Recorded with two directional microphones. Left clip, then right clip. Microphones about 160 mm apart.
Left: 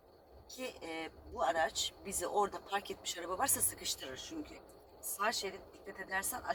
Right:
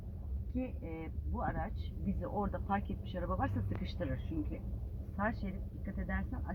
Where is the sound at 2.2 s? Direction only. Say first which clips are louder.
Left 6 dB; 20° left (ahead or behind).